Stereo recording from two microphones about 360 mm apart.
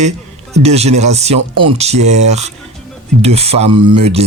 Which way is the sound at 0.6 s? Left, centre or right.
Centre.